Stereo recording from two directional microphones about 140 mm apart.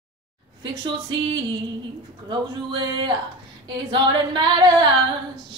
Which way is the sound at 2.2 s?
35° right (ahead or behind).